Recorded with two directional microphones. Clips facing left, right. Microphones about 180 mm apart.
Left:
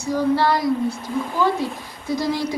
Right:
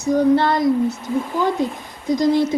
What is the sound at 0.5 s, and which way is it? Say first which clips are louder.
A woman's voice: right 3 dB; 20° right (ahead or behind).